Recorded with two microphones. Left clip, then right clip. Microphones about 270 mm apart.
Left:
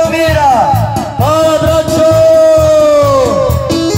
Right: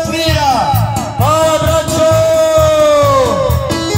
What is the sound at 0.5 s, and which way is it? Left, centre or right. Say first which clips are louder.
Music: left 4 dB; left.